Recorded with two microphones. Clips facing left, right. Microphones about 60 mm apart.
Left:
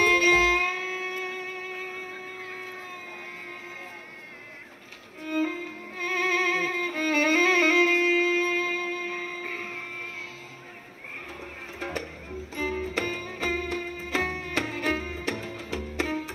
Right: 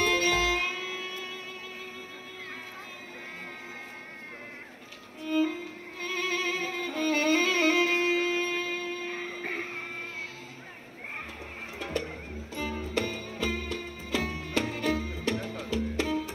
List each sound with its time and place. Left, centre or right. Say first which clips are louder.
0.0 s music: left 5 dB; left
5.2 s music: even; left
9.4 s a sound: even; right
11.8 s music: even; left